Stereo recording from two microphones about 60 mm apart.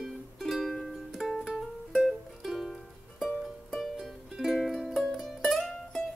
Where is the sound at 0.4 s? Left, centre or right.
Centre.